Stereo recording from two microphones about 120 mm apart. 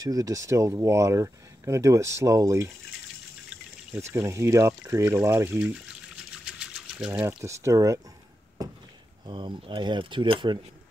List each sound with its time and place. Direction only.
0.0 s speech: 30° right (ahead or behind)
4.0 s speech: 25° right (ahead or behind)
6.3 s a sound: 5° right (ahead or behind)
7.1 s speech: 20° right (ahead or behind)
9.2 s speech: 40° right (ahead or behind)